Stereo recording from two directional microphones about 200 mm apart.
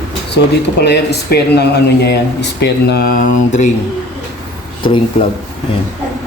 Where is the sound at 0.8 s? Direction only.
55° left (ahead or behind); by 3.7 s 40° left (ahead or behind).